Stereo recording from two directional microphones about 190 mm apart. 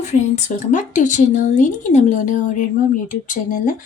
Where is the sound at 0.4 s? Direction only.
40° left (ahead or behind).